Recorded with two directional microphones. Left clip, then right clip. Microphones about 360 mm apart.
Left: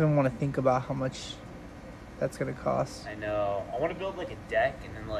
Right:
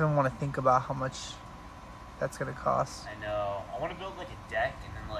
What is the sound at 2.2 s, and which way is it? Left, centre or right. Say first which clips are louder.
Speech: left 1 dB; centre.